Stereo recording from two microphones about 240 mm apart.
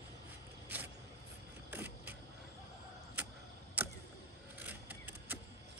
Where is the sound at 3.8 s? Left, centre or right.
Centre.